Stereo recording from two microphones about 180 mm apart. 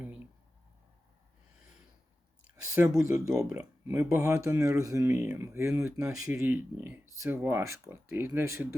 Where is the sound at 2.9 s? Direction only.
15° right (ahead or behind).